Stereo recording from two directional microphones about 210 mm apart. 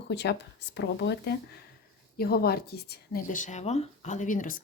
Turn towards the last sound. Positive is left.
turn(degrees=40)  # may be behind; listen again after turning